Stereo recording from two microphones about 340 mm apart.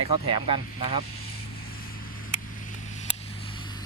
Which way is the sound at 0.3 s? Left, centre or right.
Centre.